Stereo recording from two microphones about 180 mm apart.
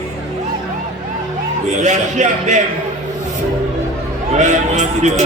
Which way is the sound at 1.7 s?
40° right (ahead or behind).